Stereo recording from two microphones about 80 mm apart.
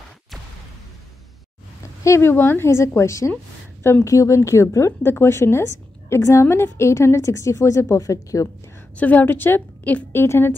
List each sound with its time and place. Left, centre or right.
2.0 s a woman's voice: left
8.9 s a woman's voice: left
10.2 s a woman's voice: left